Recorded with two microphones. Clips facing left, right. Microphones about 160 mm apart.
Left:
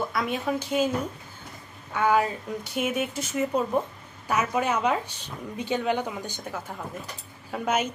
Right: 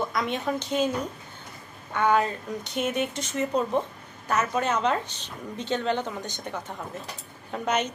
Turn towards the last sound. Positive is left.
turn(degrees=5)  # may be behind; listen again after turning